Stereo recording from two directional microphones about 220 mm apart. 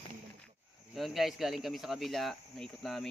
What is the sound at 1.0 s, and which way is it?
Speech, centre (ahead or behind).